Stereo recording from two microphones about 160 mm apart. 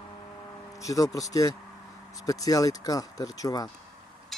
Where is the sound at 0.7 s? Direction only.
20° left (ahead or behind).